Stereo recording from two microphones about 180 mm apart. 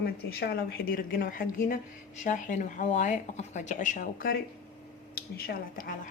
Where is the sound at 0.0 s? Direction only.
65° left (ahead or behind).